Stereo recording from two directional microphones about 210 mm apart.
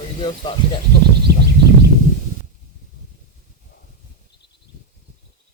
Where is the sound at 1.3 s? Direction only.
50° right (ahead or behind).